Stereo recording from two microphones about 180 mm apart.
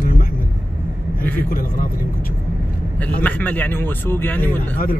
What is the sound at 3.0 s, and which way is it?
Speech, 10° left (ahead or behind).